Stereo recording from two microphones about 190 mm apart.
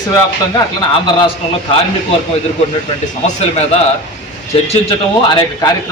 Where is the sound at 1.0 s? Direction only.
25° left (ahead or behind).